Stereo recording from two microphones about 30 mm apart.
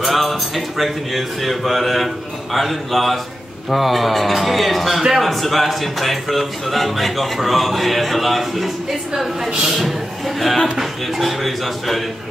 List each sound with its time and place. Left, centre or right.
0.0 s speech: centre
9.5 s a man's voice: right
9.8 s a man's voice: centre